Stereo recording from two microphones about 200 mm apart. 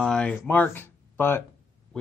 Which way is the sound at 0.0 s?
5° left (ahead or behind).